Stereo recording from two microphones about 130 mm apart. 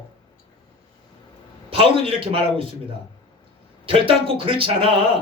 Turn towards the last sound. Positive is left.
turn(degrees=-45)  # may be behind; listen again after turning